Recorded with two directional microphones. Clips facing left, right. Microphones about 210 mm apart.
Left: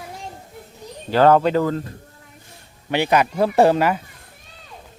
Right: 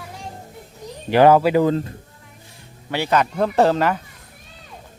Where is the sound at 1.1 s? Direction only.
10° right (ahead or behind).